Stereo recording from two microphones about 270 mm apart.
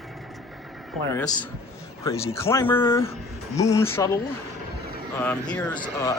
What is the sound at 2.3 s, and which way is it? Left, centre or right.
Speech, centre.